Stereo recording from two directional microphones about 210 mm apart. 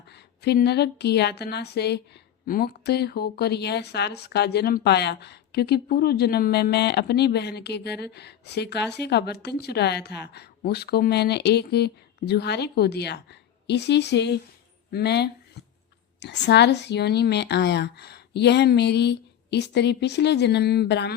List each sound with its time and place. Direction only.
0.1 s speech: 50° left (ahead or behind)